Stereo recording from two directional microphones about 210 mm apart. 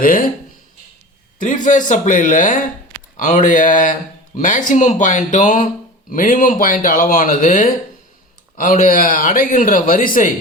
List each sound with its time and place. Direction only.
0.0 s speech: 40° left (ahead or behind)
1.4 s speech: 40° left (ahead or behind)